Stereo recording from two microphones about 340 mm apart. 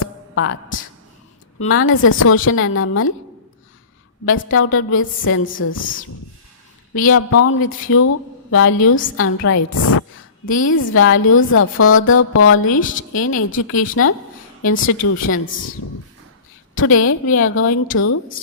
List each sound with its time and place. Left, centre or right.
0.0 s music: left
1.5 s speech: left
4.3 s speech: left
6.9 s speech: left
12.8 s a woman's voice: left
13.2 s speech: left
16.7 s speech: left